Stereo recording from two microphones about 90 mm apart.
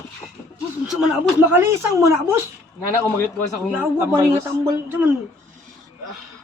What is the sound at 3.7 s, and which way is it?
A woman's voice, 25° right (ahead or behind).